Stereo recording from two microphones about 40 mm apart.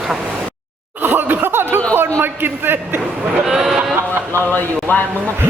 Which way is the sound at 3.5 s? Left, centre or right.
Centre.